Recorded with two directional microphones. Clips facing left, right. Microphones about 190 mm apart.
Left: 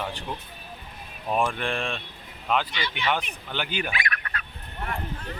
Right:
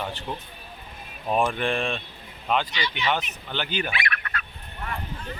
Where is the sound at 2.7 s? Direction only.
55° left (ahead or behind).